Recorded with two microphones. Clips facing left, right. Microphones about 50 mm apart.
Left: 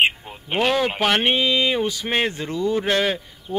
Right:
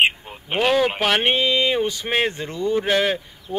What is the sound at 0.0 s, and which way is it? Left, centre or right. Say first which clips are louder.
Speech: right 1 dB; centre.